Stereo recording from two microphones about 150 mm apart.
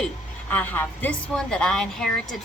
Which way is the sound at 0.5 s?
10° left (ahead or behind).